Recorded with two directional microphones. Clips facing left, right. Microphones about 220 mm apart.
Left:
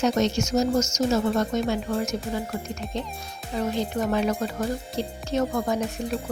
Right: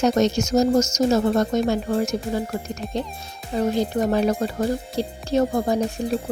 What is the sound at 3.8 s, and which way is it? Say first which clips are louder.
Speech: right 3 dB; 40° right (ahead or behind).